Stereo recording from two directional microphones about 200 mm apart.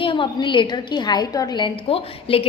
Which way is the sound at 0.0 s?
25° left (ahead or behind).